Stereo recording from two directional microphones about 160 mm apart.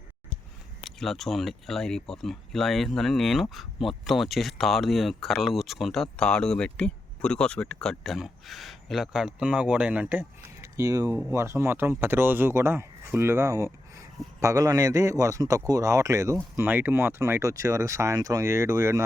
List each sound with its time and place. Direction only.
0.9 s a man's voice: centre (ahead or behind); by 19.0 s 15° right (ahead or behind)